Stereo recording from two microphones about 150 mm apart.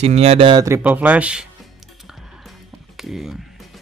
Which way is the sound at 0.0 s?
45° right (ahead or behind).